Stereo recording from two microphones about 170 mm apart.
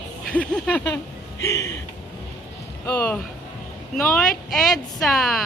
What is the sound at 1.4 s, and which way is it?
Speech, 20° left (ahead or behind).